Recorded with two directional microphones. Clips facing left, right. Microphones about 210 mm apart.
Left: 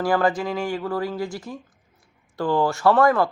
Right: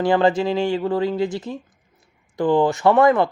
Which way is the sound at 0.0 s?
25° right (ahead or behind).